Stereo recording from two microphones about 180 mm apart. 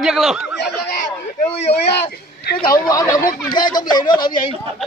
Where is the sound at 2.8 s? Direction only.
20° left (ahead or behind).